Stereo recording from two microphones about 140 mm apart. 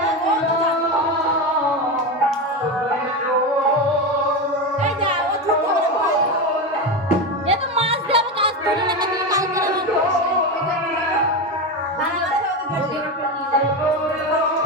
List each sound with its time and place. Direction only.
7.4 s music: 45° right (ahead or behind)